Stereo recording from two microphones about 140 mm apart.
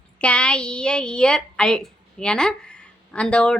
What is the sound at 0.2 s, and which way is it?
A woman's voice, 10° left (ahead or behind).